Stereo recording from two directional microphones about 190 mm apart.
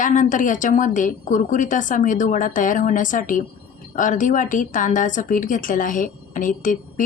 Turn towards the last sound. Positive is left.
turn(degrees=45)  # may be behind; listen again after turning